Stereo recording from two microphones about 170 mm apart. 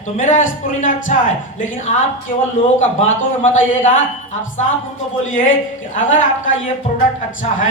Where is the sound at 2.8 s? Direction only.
45° left (ahead or behind).